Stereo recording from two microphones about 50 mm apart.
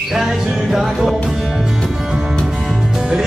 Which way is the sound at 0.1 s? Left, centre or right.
Centre.